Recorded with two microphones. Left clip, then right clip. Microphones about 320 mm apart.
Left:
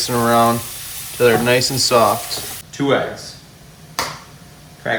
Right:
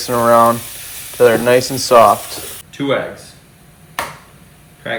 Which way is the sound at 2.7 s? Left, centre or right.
Centre.